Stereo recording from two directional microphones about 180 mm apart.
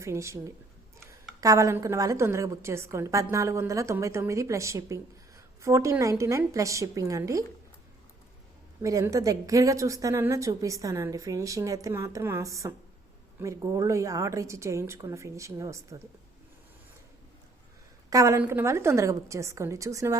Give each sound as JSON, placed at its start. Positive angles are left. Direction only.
{"t": 0.0, "sound": "a woman's voice", "side_deg": -15}
{"t": 8.8, "sound": "a woman's voice", "side_deg": -15}
{"t": 18.1, "sound": "a woman's voice", "side_deg": -15}